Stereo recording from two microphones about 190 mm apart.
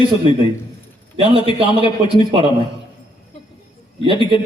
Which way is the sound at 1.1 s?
30° right (ahead or behind).